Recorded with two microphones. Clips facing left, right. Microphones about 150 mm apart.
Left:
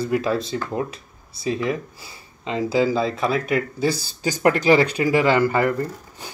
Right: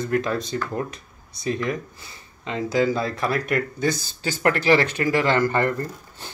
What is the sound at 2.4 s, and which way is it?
Speech, 30° left (ahead or behind).